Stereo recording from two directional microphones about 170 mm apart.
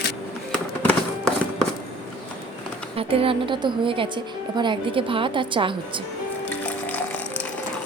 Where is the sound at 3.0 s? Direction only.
35° right (ahead or behind).